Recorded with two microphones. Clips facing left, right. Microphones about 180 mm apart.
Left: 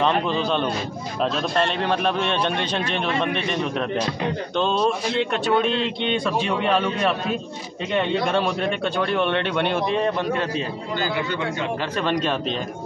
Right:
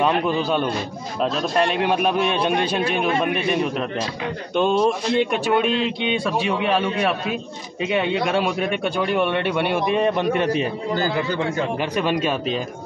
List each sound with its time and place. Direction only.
0.0 s speech: 10° right (ahead or behind)
11.0 s a man's voice: 35° right (ahead or behind)
11.8 s speech: 10° right (ahead or behind)